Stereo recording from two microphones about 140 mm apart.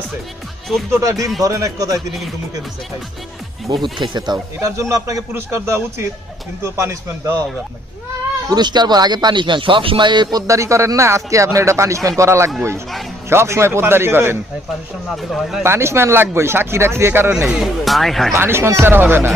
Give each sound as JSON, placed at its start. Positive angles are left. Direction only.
{"t": 0.7, "sound": "speech", "side_deg": 0}
{"t": 1.0, "sound": "speech", "side_deg": -25}
{"t": 3.8, "sound": "speech", "side_deg": -35}
{"t": 4.6, "sound": "speech", "side_deg": -20}
{"t": 8.5, "sound": "speech", "side_deg": -30}
{"t": 15.2, "sound": "speech", "side_deg": 0}
{"t": 15.6, "sound": "speech", "side_deg": -20}
{"t": 17.3, "sound": "speech", "side_deg": -5}
{"t": 18.3, "sound": "speech", "side_deg": -15}